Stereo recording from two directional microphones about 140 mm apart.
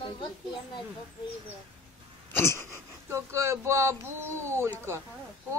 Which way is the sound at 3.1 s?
20° right (ahead or behind).